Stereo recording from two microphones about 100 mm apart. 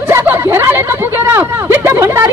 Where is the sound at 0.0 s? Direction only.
20° right (ahead or behind).